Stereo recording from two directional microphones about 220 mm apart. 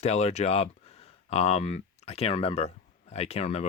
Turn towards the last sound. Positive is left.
turn(degrees=30)  # may be behind; listen again after turning